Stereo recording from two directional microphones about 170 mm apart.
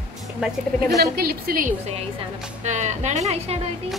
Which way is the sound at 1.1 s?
65° right (ahead or behind).